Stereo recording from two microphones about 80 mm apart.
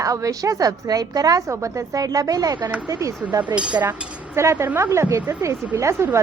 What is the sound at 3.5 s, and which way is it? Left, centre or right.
Speech, centre.